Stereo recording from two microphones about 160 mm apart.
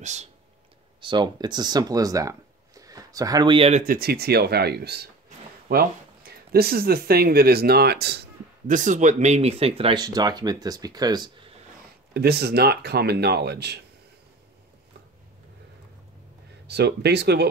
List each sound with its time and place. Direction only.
0.0 s speech: 45° right (ahead or behind)
1.0 s speech: 30° right (ahead or behind)
3.8 s speech: 70° right (ahead or behind); by 5.0 s 90° right
6.5 s speech: 75° right (ahead or behind); by 8.3 s 90° right
8.6 s speech: 50° right (ahead or behind); by 11.5 s 25° right (ahead or behind)
12.1 s speech: 85° right
16.6 s speech: 90° right